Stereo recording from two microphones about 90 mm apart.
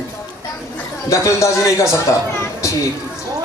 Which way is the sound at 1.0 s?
35° left (ahead or behind).